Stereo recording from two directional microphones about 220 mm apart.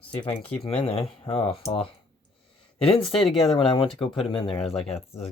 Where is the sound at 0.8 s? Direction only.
25° left (ahead or behind).